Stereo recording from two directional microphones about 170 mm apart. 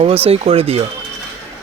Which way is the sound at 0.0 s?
35° right (ahead or behind).